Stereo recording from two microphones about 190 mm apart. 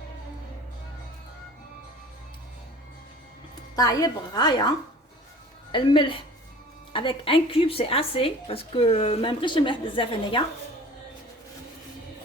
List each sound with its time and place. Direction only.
3.8 s speech: 20° left (ahead or behind)
5.7 s speech: 25° left (ahead or behind)